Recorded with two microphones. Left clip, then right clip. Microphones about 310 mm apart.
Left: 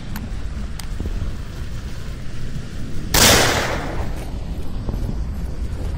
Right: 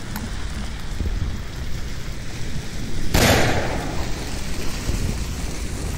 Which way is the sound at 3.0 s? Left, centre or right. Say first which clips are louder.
Left 4 dB; centre.